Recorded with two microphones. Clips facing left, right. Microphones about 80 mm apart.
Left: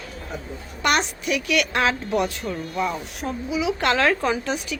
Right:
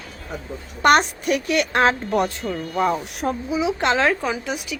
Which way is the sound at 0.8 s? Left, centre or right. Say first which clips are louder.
Right 6 dB; right.